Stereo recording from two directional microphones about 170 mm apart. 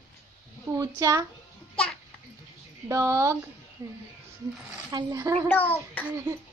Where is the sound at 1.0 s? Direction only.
20° right (ahead or behind).